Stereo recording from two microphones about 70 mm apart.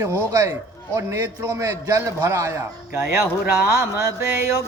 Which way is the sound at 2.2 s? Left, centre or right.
Right.